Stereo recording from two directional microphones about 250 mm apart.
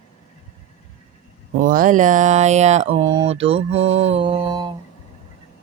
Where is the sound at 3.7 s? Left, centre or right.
Right.